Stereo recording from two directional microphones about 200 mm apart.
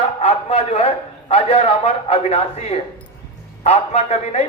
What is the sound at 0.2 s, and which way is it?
A man's voice, 30° left (ahead or behind).